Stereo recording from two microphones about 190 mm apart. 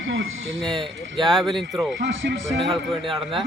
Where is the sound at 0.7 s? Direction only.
Centre (ahead or behind).